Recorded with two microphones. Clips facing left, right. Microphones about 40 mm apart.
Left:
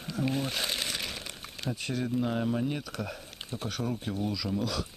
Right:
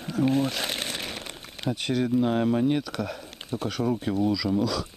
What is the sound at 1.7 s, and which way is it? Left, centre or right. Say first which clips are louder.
Speech: right 7 dB; right.